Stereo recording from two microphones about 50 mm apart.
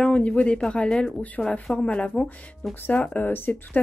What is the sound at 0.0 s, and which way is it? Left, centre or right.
Speech, centre.